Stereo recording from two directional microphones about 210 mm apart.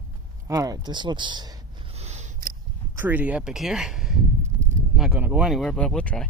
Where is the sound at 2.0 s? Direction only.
35° right (ahead or behind).